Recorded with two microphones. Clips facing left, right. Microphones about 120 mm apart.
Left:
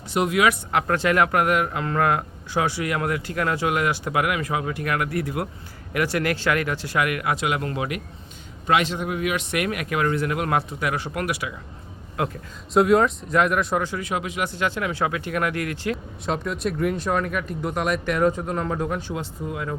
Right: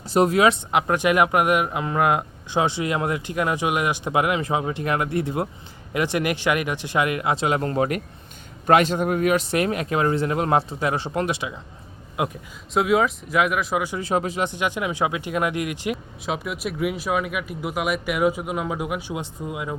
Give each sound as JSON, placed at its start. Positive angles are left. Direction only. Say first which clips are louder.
{"t": 0.1, "sound": "a man's voice", "louder": "right 3 dB", "side_deg": -35}
{"t": 12.7, "sound": "speech", "louder": "left 2 dB", "side_deg": -5}
{"t": 14.0, "sound": "speech", "louder": "right 4 dB", "side_deg": -35}
{"t": 14.4, "sound": "speech", "louder": "right 1 dB", "side_deg": -15}
{"t": 16.2, "sound": "speech", "louder": "left 2 dB", "side_deg": -5}